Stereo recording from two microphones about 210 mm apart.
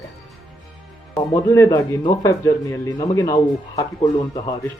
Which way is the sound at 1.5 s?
15° left (ahead or behind).